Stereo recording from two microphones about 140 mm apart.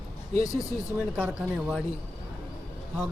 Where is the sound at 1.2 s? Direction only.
5° right (ahead or behind).